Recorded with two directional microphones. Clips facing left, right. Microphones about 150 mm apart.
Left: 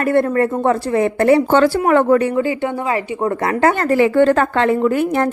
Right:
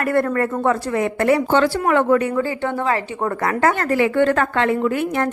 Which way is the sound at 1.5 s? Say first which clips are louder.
Left 4 dB; 45° left (ahead or behind).